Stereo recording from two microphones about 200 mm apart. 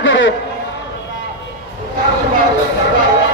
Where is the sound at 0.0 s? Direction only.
70° left (ahead or behind).